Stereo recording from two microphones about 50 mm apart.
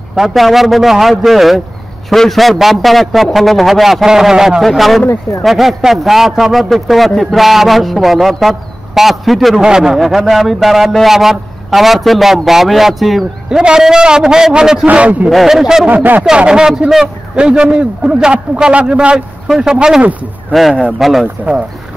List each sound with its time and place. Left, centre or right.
0.1 s a man's voice: centre
4.6 s a man's voice: centre
9.6 s a man's voice: centre
9.9 s a man's voice: centre
13.5 s a man's voice: centre
14.9 s a man's voice: right
15.2 s a man's voice: centre
15.9 s speech: right
16.3 s a man's voice: centre
20.5 s a man's voice: centre